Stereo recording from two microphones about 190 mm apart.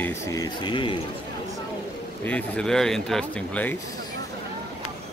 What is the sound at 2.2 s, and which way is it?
Speech, 5° left (ahead or behind).